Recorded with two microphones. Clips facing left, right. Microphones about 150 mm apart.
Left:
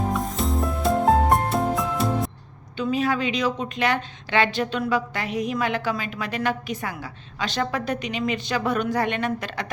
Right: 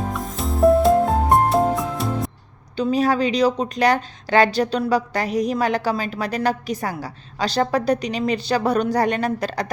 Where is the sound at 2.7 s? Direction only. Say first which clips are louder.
Right 4 dB; 40° right (ahead or behind).